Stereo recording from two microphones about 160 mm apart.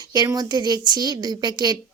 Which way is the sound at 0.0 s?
25° right (ahead or behind).